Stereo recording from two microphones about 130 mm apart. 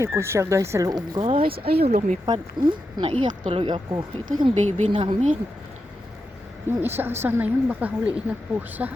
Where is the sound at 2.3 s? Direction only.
35° right (ahead or behind).